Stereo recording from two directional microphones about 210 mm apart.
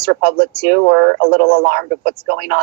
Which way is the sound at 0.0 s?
45° right (ahead or behind).